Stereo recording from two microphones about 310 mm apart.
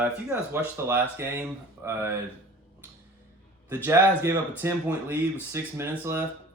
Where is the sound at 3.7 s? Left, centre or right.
Centre.